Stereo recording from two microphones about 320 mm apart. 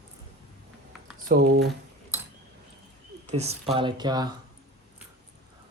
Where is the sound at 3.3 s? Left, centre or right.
Centre.